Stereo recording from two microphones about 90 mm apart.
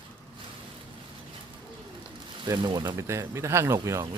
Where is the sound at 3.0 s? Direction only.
30° right (ahead or behind).